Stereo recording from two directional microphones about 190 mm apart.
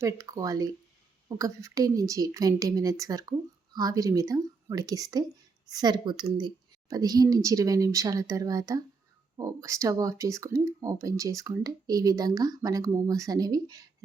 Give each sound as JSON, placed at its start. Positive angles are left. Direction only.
{"t": 0.0, "sound": "speech", "side_deg": -20}